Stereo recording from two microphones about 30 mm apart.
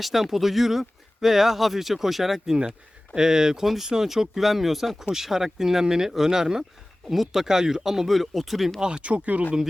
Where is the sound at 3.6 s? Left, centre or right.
Centre.